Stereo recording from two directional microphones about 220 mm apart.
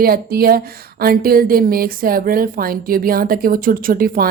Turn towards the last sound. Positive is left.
turn(degrees=-40)  # may be behind; listen again after turning